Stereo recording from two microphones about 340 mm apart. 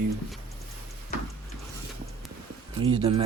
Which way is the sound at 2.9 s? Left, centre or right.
Centre.